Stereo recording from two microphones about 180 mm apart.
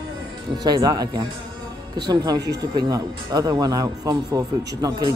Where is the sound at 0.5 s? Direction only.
20° right (ahead or behind).